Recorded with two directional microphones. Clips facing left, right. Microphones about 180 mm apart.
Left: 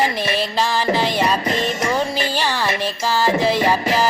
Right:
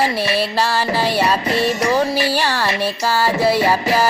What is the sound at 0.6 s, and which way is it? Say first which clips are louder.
Music: even; 15° left (ahead or behind).